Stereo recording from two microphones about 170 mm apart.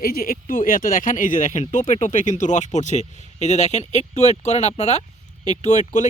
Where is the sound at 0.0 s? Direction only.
55° left (ahead or behind).